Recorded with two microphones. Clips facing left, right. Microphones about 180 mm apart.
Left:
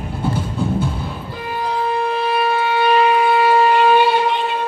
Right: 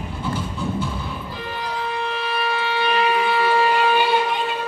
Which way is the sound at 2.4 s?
50° left (ahead or behind).